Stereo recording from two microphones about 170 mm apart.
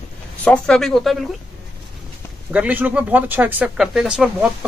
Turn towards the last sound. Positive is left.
turn(degrees=-5)  # may be behind; listen again after turning